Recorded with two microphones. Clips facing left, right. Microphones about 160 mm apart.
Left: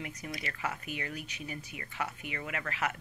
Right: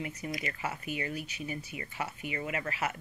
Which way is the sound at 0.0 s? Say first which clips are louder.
Right 4 dB; 10° right (ahead or behind).